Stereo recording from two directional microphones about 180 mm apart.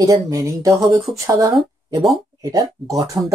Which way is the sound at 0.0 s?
20° right (ahead or behind).